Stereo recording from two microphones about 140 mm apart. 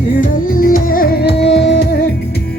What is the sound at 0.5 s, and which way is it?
Music, 80° left.